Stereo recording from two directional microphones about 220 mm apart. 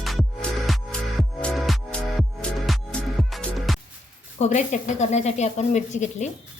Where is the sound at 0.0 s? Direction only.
Centre (ahead or behind).